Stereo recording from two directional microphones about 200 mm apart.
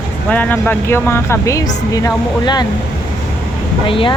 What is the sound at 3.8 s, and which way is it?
Speech, 25° left (ahead or behind).